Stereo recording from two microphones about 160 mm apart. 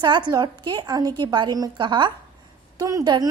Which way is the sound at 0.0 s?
30° right (ahead or behind).